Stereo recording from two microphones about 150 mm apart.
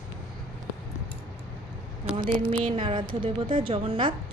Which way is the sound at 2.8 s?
35° right (ahead or behind).